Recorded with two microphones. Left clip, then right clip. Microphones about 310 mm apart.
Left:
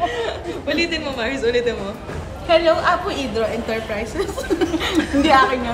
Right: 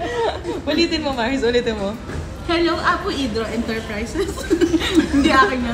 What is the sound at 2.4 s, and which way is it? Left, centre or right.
A woman's voice, centre.